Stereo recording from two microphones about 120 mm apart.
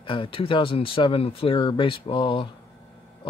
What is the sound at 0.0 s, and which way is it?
Speech, 45° left (ahead or behind).